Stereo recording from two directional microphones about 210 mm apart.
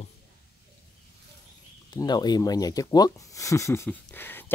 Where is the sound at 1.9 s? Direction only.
20° left (ahead or behind).